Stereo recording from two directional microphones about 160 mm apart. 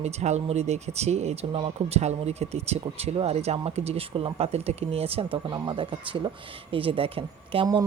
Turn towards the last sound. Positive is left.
turn(degrees=-35)  # may be behind; listen again after turning